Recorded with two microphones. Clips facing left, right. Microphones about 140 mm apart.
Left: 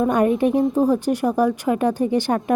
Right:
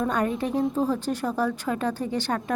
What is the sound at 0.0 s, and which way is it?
A woman's voice, 15° left (ahead or behind).